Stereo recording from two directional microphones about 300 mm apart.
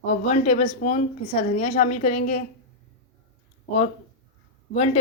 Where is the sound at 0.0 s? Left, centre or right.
Left.